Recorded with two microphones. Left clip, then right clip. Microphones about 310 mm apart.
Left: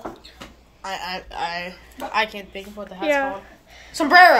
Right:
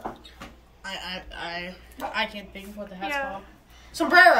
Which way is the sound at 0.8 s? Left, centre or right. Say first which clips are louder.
Left 5 dB; centre.